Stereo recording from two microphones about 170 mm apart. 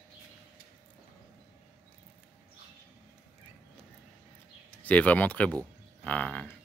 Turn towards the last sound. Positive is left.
turn(degrees=10)  # may be behind; listen again after turning